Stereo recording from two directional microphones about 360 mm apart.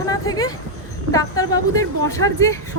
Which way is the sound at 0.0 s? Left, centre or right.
Centre.